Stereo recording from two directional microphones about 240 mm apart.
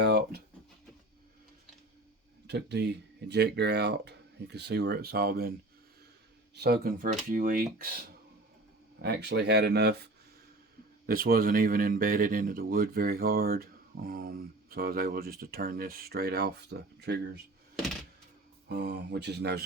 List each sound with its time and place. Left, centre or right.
0.0 s a sound: right
2.5 s speech: right
6.6 s speech: right
11.0 s speech: right
18.7 s speech: right